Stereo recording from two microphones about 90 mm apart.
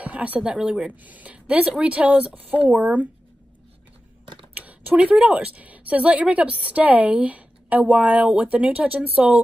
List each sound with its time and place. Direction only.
0.0 s speech: 15° right (ahead or behind)
4.6 s speech: 15° right (ahead or behind)